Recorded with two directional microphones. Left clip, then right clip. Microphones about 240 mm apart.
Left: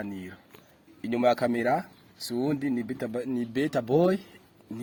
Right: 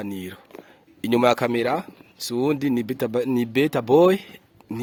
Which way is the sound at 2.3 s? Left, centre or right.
Right.